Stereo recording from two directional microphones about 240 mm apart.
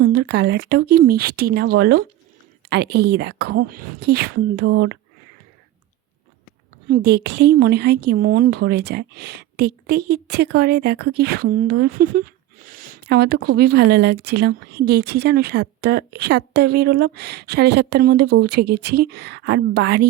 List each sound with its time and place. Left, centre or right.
0.0 s a woman's voice: right
6.8 s a woman's voice: right